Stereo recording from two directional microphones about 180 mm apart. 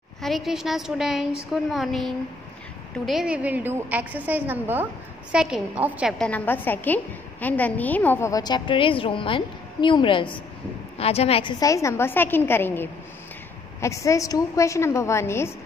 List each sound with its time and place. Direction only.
0.2 s a woman's voice: centre (ahead or behind)
6.1 s a woman's voice: 5° left (ahead or behind); by 11.5 s 35° left (ahead or behind)
11.6 s a woman's voice: 15° left (ahead or behind)